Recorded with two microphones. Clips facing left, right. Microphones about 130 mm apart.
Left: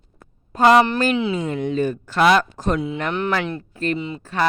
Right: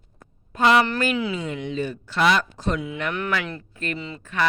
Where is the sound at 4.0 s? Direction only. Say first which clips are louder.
Left 6 dB; 20° left (ahead or behind).